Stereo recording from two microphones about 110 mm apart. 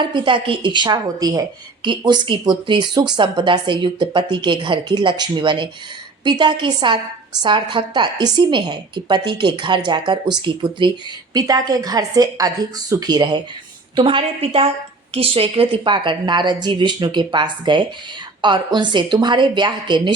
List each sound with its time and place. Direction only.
0.0 s a woman's voice: 45° right (ahead or behind)
13.9 s a woman's voice: 50° right (ahead or behind)